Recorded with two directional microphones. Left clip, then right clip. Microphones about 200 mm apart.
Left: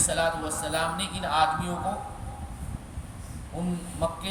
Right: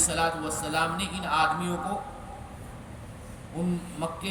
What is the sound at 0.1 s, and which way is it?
A man's voice, 15° left (ahead or behind).